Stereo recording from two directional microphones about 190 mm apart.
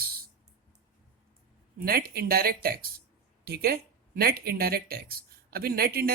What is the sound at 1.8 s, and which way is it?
Speech, 55° right (ahead or behind).